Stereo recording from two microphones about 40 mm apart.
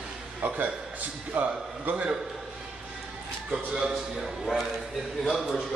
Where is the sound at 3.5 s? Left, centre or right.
Centre.